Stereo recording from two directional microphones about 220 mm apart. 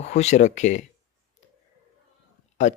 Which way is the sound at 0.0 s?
30° left (ahead or behind).